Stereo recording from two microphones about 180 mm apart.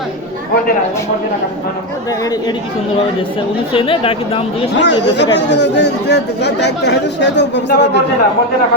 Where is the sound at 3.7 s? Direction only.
30° left (ahead or behind).